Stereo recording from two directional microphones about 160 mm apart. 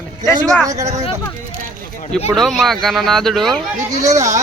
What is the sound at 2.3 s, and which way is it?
Speech, centre (ahead or behind).